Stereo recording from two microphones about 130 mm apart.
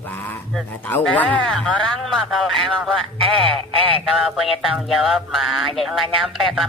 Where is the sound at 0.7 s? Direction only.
15° left (ahead or behind).